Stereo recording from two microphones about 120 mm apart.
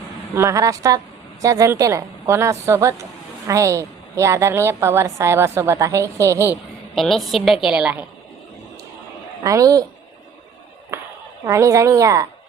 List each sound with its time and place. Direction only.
0.3 s a woman's voice: 25° right (ahead or behind)
6.9 s a woman's voice: centre (ahead or behind)
9.4 s a woman's voice: 30° right (ahead or behind)
11.4 s a woman's voice: 25° right (ahead or behind)